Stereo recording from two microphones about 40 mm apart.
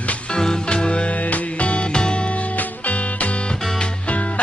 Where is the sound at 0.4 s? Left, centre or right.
Centre.